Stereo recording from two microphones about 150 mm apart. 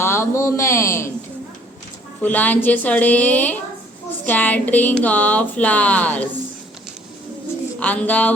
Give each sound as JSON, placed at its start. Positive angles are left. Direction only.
{"t": 0.0, "sound": "a man's voice", "side_deg": 15}
{"t": 2.2, "sound": "speech", "side_deg": 10}
{"t": 7.8, "sound": "speech", "side_deg": 10}